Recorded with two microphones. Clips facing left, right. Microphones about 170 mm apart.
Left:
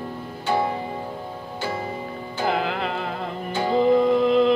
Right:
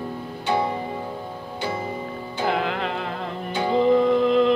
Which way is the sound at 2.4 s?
Centre (ahead or behind).